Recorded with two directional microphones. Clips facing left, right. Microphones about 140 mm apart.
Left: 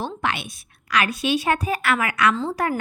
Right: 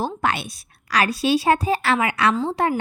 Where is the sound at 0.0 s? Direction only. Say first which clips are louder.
Right 3 dB; 40° right (ahead or behind).